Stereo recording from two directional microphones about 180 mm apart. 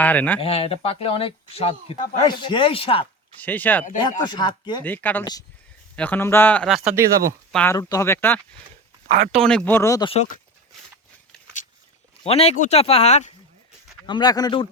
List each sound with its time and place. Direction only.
0.0 s speech: 10° left (ahead or behind)
0.3 s speech: 30° left (ahead or behind)
3.4 s speech: 10° left (ahead or behind)
4.2 s speech: 25° left (ahead or behind)
4.8 s speech: 10° left (ahead or behind)
7.8 s speech: 20° left (ahead or behind)
9.0 s speech: 40° right (ahead or behind)
9.4 s speech: 5° left (ahead or behind)
12.2 s speech: 35° left (ahead or behind)
14.1 s speech: 20° left (ahead or behind)